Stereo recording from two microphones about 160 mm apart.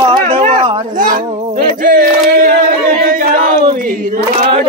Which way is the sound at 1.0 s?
60° right (ahead or behind).